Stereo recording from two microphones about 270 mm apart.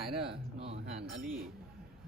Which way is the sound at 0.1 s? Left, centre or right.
Centre.